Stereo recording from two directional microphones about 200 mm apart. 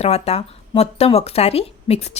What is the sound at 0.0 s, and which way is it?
A woman's voice, 30° left (ahead or behind).